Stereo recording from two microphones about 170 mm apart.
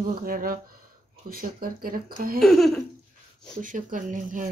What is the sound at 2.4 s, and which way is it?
Speech, centre (ahead or behind).